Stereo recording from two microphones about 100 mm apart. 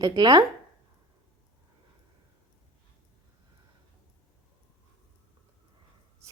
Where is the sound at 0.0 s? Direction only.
45° right (ahead or behind).